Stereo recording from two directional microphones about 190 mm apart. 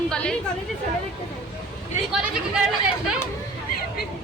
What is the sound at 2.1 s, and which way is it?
A woman's voice, 5° right (ahead or behind).